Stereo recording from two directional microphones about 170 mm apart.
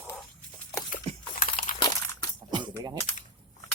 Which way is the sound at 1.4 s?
55° left (ahead or behind).